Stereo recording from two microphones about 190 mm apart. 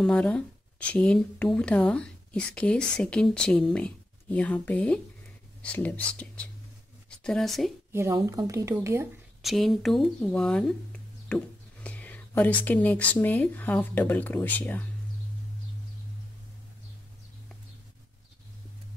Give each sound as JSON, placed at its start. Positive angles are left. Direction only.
{"t": 0.0, "sound": "speech", "side_deg": 5}
{"t": 7.9, "sound": "speech", "side_deg": -15}
{"t": 9.4, "sound": "speech", "side_deg": 0}